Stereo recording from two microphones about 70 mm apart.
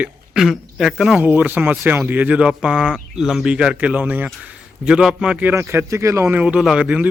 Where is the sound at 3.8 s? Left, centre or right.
Right.